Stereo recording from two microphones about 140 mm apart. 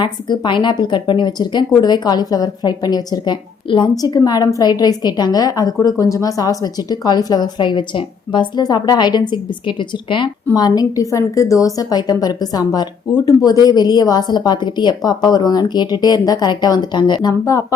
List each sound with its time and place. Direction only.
0.0 s a woman's voice: 35° left (ahead or behind)